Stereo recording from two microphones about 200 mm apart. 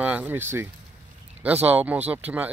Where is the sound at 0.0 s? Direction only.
5° right (ahead or behind).